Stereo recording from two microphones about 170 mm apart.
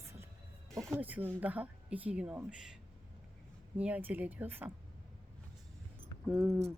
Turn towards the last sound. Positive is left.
turn(degrees=0)  # may be behind; listen again after turning